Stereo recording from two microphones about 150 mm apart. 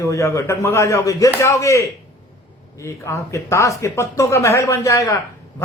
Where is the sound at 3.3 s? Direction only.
20° left (ahead or behind).